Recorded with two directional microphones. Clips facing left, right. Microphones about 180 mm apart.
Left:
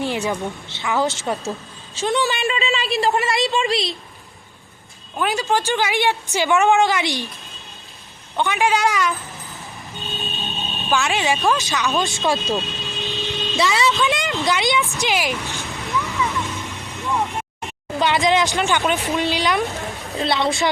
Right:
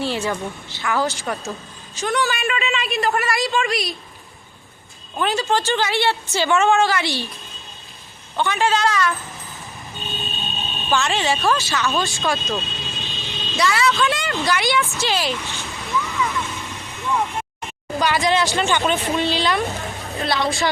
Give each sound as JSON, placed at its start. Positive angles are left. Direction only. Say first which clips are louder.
{"t": 0.0, "sound": "a woman's voice", "louder": "left 1 dB", "side_deg": 15}
{"t": 5.1, "sound": "speech", "louder": "even", "side_deg": 10}
{"t": 8.4, "sound": "speech", "louder": "left 1 dB", "side_deg": 15}
{"t": 10.1, "sound": "a sound", "louder": "left 1 dB", "side_deg": 0}
{"t": 10.9, "sound": "speech", "louder": "even", "side_deg": 10}
{"t": 12.8, "sound": "vehicle", "louder": "left 4 dB", "side_deg": 0}
{"t": 13.1, "sound": "vehicle", "louder": "left 2 dB", "side_deg": 20}
{"t": 14.4, "sound": "speech", "louder": "even", "side_deg": 20}
{"t": 16.0, "sound": "vehicle", "louder": "even", "side_deg": 15}
{"t": 18.0, "sound": "a woman's voice", "louder": "left 1 dB", "side_deg": 20}